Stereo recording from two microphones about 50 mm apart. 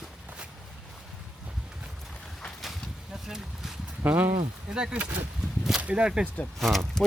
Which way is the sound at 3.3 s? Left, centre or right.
Centre.